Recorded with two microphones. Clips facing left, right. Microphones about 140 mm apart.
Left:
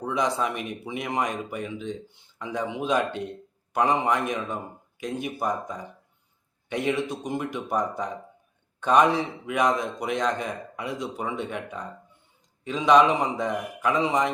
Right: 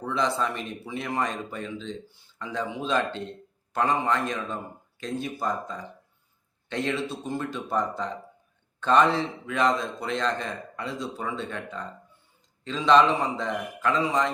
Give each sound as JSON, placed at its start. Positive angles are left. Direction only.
{"t": 0.0, "sound": "speech", "side_deg": 15}